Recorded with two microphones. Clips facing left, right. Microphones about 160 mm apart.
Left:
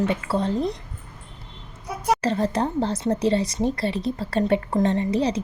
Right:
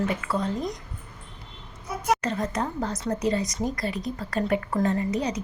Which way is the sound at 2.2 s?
30° left (ahead or behind).